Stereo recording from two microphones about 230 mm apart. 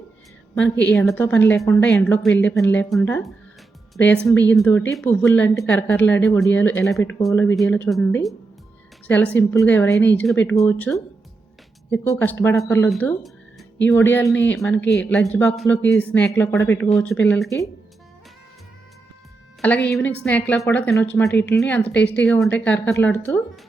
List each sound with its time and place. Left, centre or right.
0.5 s a woman's voice: centre
14.8 s speech: left
15.0 s speech: centre
19.6 s a woman's voice: centre